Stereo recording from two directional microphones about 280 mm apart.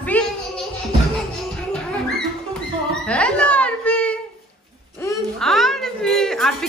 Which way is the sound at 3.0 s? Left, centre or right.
Centre.